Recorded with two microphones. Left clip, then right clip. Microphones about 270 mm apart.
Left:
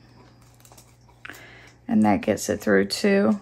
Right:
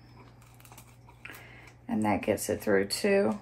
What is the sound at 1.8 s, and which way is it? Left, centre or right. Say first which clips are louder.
Speech: left 7 dB; left.